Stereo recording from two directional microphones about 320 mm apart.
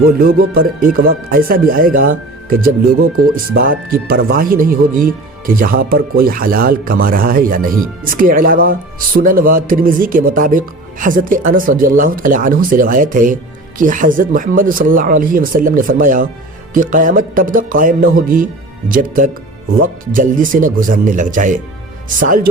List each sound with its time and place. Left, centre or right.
0.0 s speech: right